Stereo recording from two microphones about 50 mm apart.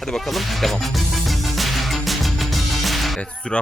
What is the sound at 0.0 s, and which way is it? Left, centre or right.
Music, centre.